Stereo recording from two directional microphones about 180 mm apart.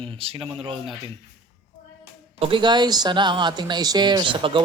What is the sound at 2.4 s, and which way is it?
Speech, 25° right (ahead or behind).